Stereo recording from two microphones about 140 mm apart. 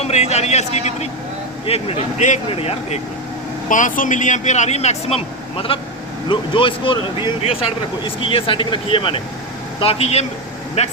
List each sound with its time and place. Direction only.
0.0 s a man's voice: 50° left (ahead or behind)
2.5 s a man's voice: 45° left (ahead or behind)
3.7 s a man's voice: 65° left (ahead or behind); by 10.9 s 50° left (ahead or behind)